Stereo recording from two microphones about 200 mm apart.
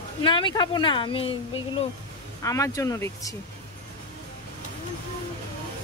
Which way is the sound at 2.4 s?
15° left (ahead or behind).